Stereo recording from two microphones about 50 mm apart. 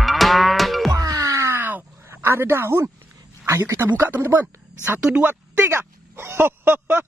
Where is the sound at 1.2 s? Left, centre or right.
Right.